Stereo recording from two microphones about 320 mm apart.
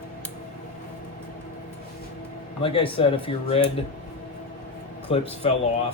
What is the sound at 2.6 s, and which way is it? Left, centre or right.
Speech, centre.